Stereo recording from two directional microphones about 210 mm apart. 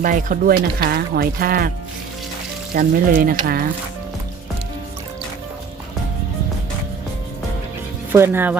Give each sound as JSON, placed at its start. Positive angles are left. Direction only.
{"t": 0.0, "sound": "speech", "side_deg": -40}
{"t": 2.7, "sound": "speech", "side_deg": -45}
{"t": 8.1, "sound": "speech", "side_deg": -10}